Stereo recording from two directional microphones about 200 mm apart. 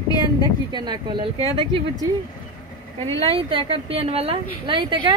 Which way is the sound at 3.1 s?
30° right (ahead or behind).